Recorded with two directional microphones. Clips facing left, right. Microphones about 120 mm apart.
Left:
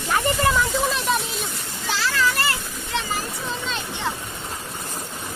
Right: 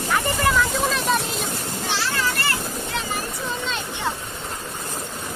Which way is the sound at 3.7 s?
Centre (ahead or behind).